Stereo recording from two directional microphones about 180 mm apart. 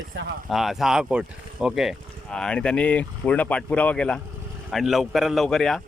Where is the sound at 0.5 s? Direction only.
Centre (ahead or behind).